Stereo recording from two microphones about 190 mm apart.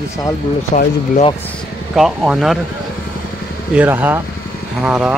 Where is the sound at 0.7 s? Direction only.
40° left (ahead or behind).